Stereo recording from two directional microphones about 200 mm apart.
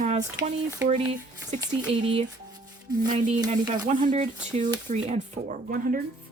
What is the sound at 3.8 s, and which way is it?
Speech, 35° right (ahead or behind).